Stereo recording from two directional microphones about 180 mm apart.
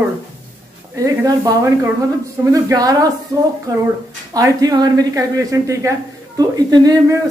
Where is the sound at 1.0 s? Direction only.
20° right (ahead or behind).